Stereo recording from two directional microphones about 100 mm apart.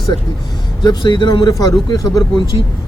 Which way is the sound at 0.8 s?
50° left (ahead or behind).